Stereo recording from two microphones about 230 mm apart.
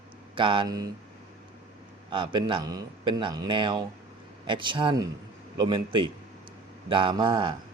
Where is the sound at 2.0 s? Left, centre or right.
Right.